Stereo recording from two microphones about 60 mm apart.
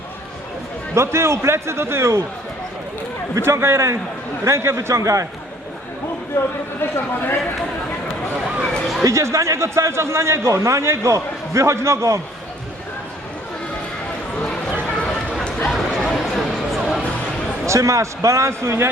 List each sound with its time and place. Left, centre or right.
0.9 s a man's voice: right
3.4 s a man's voice: right
6.3 s speech: left
6.9 s speech: left
9.0 s a man's voice: right
15.4 s a sound: centre
15.7 s a sound: centre
17.7 s speech: right